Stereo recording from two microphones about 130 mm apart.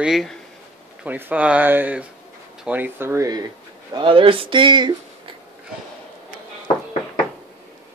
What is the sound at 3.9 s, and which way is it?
Speech, 40° right (ahead or behind).